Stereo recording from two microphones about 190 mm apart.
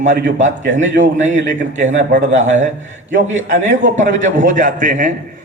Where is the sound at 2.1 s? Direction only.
70° right (ahead or behind).